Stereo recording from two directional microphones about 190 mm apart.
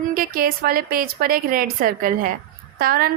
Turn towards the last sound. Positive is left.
turn(degrees=-50)  # may be behind; listen again after turning